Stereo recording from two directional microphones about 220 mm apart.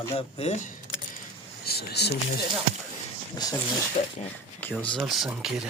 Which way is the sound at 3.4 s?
20° left (ahead or behind).